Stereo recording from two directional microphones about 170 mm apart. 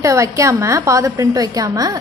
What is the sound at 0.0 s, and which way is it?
A woman's voice, 15° right (ahead or behind).